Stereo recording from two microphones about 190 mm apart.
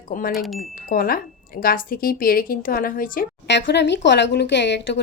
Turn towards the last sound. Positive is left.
turn(degrees=65)  # may be behind; listen again after turning